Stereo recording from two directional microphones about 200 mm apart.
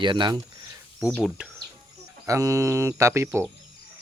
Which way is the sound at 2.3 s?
15° right (ahead or behind).